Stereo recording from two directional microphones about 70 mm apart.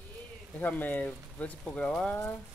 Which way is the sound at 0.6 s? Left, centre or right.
Left.